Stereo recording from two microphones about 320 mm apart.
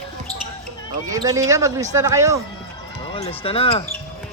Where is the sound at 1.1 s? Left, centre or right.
Centre.